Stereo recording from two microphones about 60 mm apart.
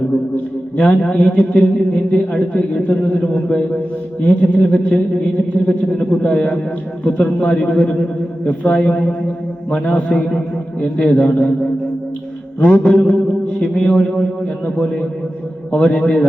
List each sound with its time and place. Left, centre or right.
0.8 s a man's voice: centre
15.7 s a man's voice: centre